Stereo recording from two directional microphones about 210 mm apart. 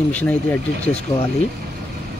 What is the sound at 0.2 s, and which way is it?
Speech, 10° left (ahead or behind).